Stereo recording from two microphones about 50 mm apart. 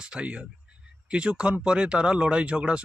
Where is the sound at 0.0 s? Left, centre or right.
Centre.